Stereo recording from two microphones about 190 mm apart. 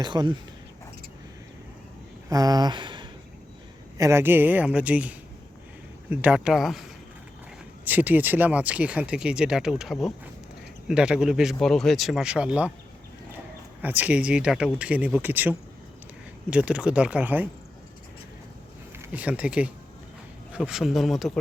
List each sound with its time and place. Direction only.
0.0 s speech: 20° right (ahead or behind)
2.3 s speech: 20° right (ahead or behind); by 6.7 s centre (ahead or behind)
7.9 s speech: 10° right (ahead or behind)
13.8 s speech: 10° right (ahead or behind)
19.0 s speech: 10° right (ahead or behind)